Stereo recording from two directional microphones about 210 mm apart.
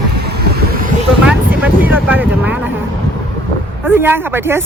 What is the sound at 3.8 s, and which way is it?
Speech, 10° right (ahead or behind).